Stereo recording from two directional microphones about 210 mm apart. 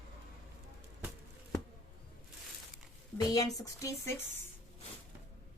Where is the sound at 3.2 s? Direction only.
15° left (ahead or behind).